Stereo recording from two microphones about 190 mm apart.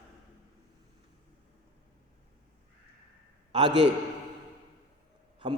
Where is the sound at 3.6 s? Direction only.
70° right (ahead or behind).